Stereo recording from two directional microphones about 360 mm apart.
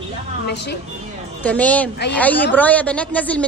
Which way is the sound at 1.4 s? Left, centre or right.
Centre.